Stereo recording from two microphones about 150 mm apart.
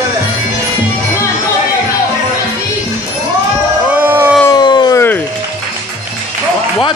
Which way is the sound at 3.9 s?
15° right (ahead or behind).